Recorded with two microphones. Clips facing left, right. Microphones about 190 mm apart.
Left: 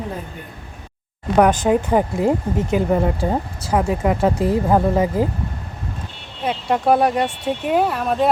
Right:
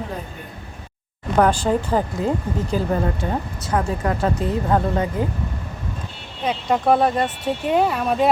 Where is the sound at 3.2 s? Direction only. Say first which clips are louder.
Left 3 dB; 30° left (ahead or behind).